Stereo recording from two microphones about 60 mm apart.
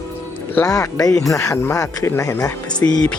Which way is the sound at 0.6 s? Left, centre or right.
Left.